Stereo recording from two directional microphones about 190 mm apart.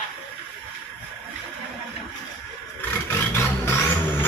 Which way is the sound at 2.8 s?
15° left (ahead or behind).